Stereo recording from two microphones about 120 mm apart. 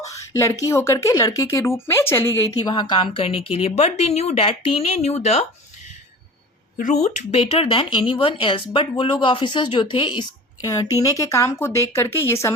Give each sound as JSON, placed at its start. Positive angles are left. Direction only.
{"t": 0.0, "sound": "speech", "side_deg": 25}
{"t": 2.6, "sound": "speech", "side_deg": 40}
{"t": 6.7, "sound": "speech", "side_deg": 80}